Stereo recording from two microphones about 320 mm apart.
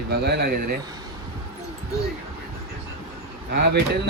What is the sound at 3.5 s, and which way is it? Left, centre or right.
Speech, right.